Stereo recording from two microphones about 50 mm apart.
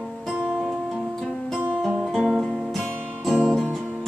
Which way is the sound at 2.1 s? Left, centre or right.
Centre.